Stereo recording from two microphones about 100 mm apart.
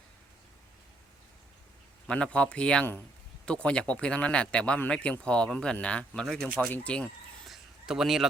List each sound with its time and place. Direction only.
2.0 s speech: 10° left (ahead or behind)
6.6 s speech: 15° left (ahead or behind)
7.4 s a sound: 5° right (ahead or behind)